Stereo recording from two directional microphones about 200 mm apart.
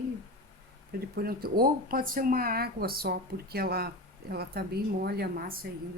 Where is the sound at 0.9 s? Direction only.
50° right (ahead or behind).